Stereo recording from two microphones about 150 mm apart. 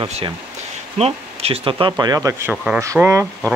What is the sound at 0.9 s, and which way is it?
Speech, 45° right (ahead or behind).